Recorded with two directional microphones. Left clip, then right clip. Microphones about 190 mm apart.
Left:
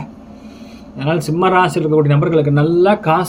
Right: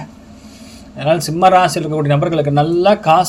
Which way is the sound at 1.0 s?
45° right (ahead or behind).